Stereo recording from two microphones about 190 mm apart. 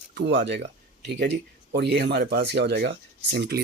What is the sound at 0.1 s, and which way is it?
Speech, 60° right (ahead or behind).